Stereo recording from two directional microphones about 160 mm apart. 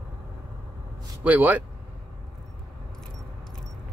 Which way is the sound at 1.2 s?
10° right (ahead or behind).